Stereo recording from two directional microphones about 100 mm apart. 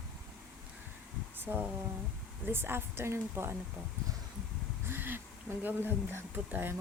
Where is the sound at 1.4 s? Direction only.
20° right (ahead or behind).